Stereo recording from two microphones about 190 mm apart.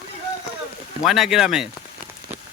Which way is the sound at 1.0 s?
Centre (ahead or behind).